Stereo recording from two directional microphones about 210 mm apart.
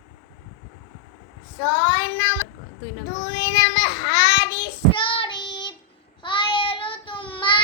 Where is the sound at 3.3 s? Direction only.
20° left (ahead or behind).